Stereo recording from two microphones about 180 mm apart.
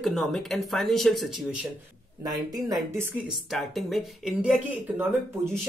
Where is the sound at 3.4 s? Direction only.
Centre (ahead or behind).